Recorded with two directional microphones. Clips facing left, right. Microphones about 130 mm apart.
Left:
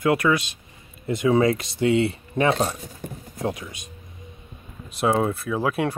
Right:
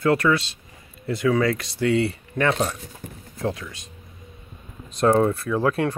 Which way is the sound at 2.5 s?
35° left (ahead or behind).